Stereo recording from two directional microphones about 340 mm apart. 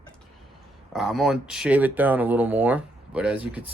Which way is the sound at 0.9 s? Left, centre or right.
Centre.